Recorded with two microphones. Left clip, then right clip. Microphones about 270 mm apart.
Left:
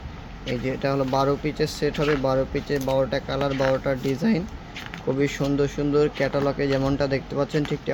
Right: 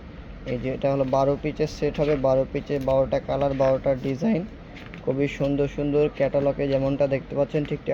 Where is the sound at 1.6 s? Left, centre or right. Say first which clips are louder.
Left 1 dB; left.